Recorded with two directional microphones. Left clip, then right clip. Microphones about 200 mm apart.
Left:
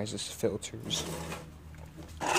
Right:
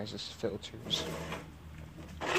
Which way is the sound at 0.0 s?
80° left.